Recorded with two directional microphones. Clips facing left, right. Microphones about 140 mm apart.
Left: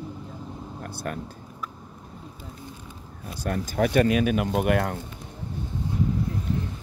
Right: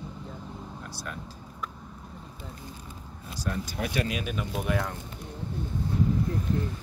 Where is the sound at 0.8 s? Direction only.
55° left (ahead or behind).